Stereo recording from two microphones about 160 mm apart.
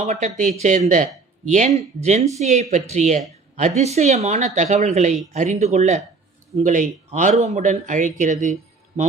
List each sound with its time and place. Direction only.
0.0 s a man's voice: 45° right (ahead or behind)